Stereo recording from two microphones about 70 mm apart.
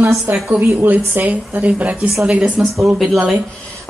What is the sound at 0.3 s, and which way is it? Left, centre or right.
Speech, right.